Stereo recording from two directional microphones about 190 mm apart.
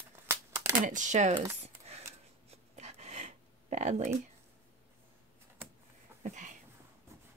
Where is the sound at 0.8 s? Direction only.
40° right (ahead or behind).